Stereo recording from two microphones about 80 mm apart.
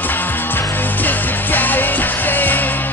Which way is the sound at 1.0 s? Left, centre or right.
Left.